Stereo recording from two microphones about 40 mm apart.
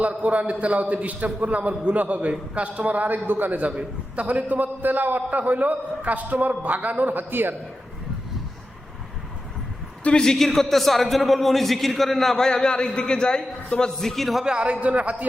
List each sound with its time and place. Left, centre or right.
0.2 s a man's voice: right
10.3 s a man's voice: centre
12.5 s a man's voice: centre
14.4 s a man's voice: right